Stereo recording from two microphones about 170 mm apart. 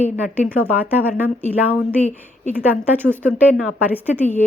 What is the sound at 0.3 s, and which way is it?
A woman's voice, 10° right (ahead or behind).